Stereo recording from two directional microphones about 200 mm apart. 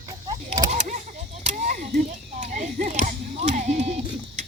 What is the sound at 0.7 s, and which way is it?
Speech, 40° right (ahead or behind).